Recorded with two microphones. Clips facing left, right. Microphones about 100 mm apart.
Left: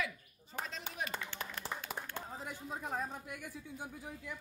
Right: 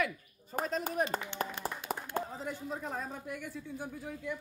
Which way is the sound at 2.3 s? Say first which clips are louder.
Right 5 dB; 10° left (ahead or behind).